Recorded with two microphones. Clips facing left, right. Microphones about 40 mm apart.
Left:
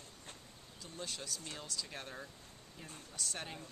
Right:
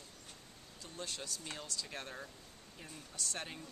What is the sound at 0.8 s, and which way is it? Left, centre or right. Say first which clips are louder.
Speech: even; centre.